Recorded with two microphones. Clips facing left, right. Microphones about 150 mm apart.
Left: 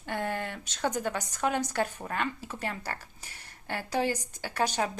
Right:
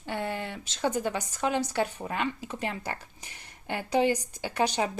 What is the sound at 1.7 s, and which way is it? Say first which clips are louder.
Speech: right 2 dB; 10° right (ahead or behind).